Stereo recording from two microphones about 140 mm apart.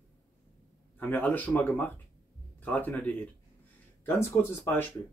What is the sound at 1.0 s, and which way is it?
Speech, 10° left (ahead or behind).